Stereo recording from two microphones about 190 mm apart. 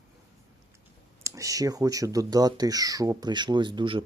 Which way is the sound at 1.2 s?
15° right (ahead or behind).